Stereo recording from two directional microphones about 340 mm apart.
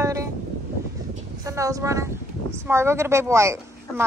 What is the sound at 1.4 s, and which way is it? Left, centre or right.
A woman's voice, centre.